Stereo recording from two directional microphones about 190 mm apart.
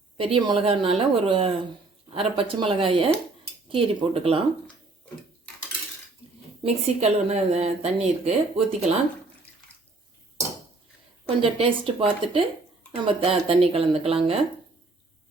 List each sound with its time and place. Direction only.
0.2 s a woman's voice: 25° right (ahead or behind)
6.7 s speech: 35° right (ahead or behind)
11.3 s a woman's voice: 30° right (ahead or behind)